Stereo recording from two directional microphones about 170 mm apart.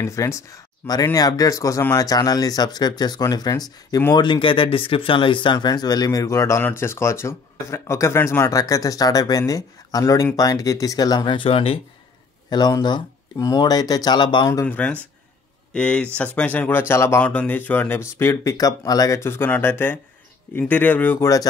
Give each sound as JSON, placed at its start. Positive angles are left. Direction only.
{"t": 0.0, "sound": "speech", "side_deg": 20}
{"t": 12.4, "sound": "speech", "side_deg": 25}